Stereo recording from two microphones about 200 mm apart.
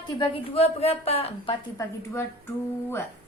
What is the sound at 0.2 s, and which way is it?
A woman's voice, 30° left (ahead or behind).